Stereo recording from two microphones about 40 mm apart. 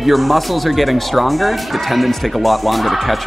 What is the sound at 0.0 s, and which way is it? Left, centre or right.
Speech, centre.